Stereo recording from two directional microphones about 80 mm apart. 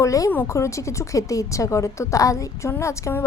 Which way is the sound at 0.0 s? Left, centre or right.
Left.